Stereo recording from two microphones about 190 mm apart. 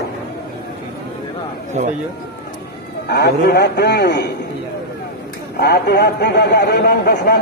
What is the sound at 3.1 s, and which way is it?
A man's voice, 60° left (ahead or behind).